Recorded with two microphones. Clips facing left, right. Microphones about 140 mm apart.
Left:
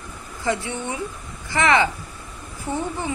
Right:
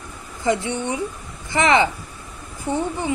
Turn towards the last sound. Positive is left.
turn(degrees=-15)  # may be behind; listen again after turning